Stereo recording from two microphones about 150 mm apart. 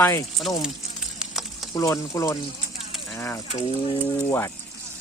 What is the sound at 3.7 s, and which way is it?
Speech, 40° left (ahead or behind).